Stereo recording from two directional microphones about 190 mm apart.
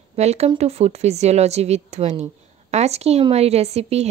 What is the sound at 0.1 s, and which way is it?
Speech, 35° right (ahead or behind).